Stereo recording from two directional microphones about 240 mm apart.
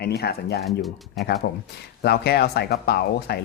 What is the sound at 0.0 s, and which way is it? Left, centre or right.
Speech, left.